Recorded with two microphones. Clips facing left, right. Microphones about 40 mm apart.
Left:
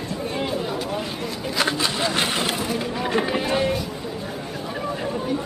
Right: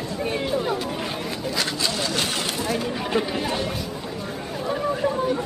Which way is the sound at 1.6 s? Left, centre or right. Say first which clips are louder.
Left 5 dB; left.